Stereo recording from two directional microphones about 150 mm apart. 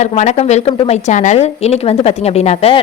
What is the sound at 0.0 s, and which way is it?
A woman's voice, 50° left (ahead or behind).